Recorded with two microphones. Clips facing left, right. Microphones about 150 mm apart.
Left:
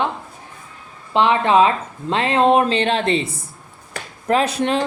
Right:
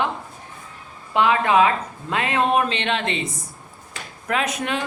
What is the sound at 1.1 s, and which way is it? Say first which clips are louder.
Speech: left 3 dB; 25° left (ahead or behind).